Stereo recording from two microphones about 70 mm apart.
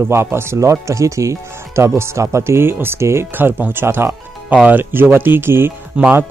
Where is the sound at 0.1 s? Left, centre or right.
Right.